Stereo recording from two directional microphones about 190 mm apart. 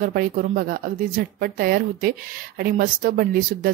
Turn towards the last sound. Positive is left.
turn(degrees=-50)  # may be behind; listen again after turning